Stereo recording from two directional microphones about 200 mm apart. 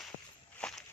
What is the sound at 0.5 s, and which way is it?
Walk, 5° left (ahead or behind).